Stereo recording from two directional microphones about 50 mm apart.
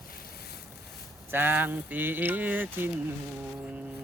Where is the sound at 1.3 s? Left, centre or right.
Right.